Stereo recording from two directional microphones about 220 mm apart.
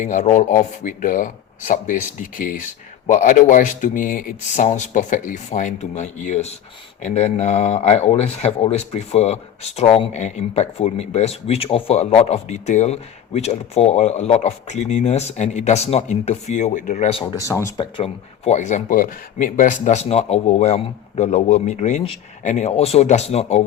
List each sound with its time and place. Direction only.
0.0 s speech: 30° left (ahead or behind)
17.4 s speech: 15° left (ahead or behind); by 23.6 s 30° left (ahead or behind)